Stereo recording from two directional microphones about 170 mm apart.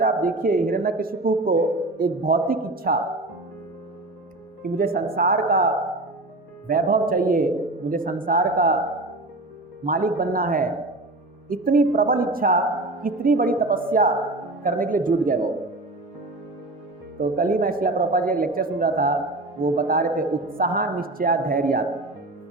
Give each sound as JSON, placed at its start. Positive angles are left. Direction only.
{"t": 0.0, "sound": "speech", "side_deg": -55}
{"t": 4.8, "sound": "speech", "side_deg": -60}
{"t": 9.8, "sound": "speech", "side_deg": -55}
{"t": 17.2, "sound": "speech", "side_deg": -55}